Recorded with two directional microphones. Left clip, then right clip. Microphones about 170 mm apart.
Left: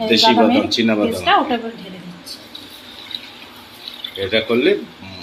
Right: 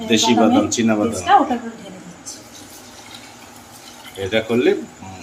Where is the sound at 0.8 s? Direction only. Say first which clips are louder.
Left 1 dB; centre (ahead or behind).